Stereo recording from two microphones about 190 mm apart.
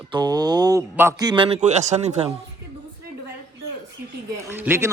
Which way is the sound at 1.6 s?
40° right (ahead or behind).